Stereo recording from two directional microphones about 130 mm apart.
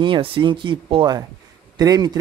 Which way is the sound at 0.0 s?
40° right (ahead or behind).